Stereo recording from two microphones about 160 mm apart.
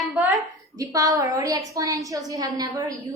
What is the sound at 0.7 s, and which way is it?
A woman's voice, 20° right (ahead or behind).